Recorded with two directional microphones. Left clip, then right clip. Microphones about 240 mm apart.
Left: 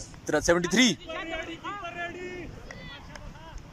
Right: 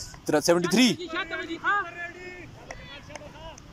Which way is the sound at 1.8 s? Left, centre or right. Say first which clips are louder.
Left 1 dB; left.